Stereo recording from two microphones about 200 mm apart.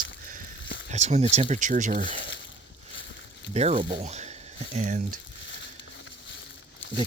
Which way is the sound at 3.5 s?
30° right (ahead or behind).